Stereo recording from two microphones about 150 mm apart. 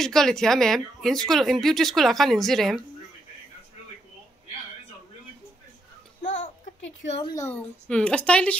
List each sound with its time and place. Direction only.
0.0 s speech: 5° left (ahead or behind)
6.2 s babbling: 60° left (ahead or behind)
7.3 s speech: 15° left (ahead or behind)